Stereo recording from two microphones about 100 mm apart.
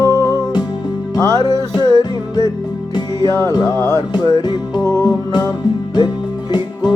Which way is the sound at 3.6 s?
25° left (ahead or behind).